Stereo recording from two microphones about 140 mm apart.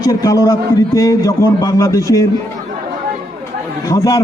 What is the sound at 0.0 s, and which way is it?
A man's voice, 25° left (ahead or behind).